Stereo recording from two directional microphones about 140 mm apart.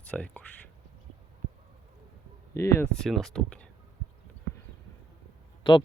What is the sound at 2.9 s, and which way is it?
Speech, centre (ahead or behind).